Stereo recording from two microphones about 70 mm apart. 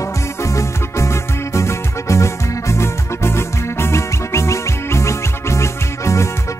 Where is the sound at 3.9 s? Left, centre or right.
Left.